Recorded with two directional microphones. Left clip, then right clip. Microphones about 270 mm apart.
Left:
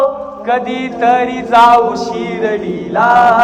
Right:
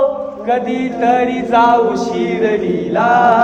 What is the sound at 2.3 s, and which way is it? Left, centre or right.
Male singing, left.